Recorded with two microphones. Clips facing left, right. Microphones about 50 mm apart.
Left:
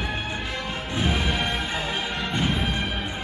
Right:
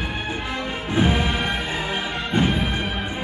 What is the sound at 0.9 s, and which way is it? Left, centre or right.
Music, right.